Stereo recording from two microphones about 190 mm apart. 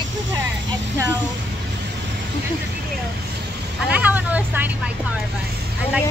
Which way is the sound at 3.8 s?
10° right (ahead or behind).